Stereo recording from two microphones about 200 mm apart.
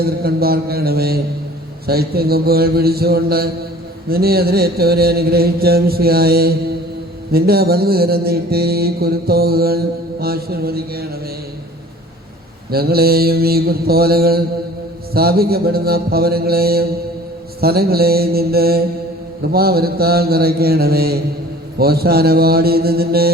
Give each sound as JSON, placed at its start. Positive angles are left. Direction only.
{"t": 0.0, "sound": "mantra", "side_deg": -50}
{"t": 12.7, "sound": "mantra", "side_deg": -50}